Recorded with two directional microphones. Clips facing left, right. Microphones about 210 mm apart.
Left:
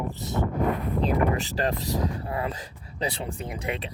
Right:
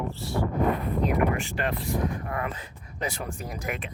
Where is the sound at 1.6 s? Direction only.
35° left (ahead or behind).